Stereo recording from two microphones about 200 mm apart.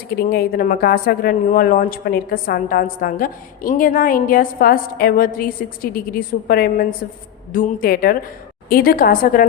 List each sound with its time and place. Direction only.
0.2 s a woman's voice: 50° left (ahead or behind)